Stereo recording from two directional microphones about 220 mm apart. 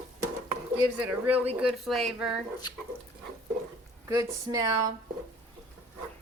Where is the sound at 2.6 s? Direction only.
20° left (ahead or behind).